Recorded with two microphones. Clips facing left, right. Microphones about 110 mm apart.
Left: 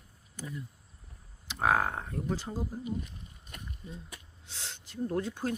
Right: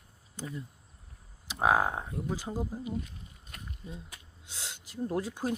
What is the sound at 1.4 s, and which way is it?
Speech, 15° right (ahead or behind).